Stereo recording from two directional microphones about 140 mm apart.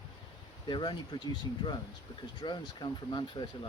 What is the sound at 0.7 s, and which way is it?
Speech, 35° left (ahead or behind).